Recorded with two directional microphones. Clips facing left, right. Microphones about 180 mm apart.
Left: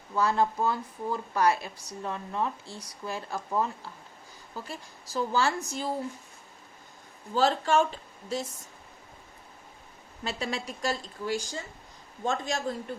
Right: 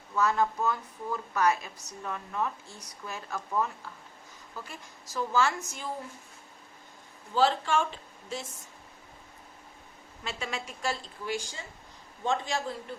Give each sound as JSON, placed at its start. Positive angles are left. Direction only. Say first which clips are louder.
{"t": 0.2, "sound": "a woman's voice", "louder": "left 1 dB", "side_deg": 30}
{"t": 7.3, "sound": "a woman's voice", "louder": "left 2 dB", "side_deg": 40}
{"t": 10.2, "sound": "a woman's voice", "louder": "left 4 dB", "side_deg": 35}